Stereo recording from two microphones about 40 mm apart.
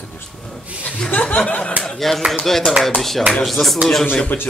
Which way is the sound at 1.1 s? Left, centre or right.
Left.